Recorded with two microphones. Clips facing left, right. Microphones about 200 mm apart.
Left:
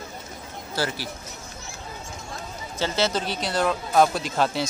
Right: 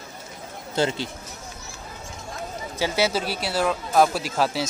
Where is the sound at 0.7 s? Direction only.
20° right (ahead or behind).